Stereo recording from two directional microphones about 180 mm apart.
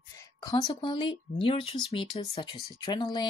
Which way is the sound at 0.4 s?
20° left (ahead or behind).